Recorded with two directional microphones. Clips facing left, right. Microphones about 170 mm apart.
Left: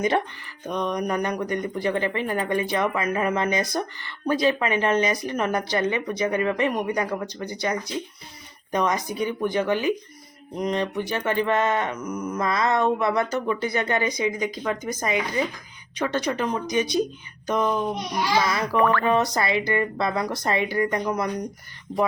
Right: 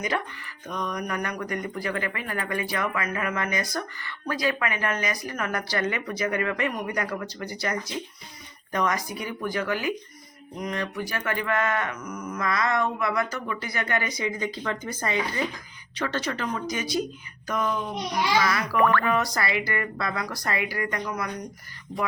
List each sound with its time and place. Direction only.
0.7 s speech: 25° left (ahead or behind)